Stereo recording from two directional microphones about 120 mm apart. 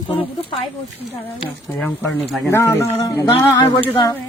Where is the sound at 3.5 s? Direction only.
40° left (ahead or behind).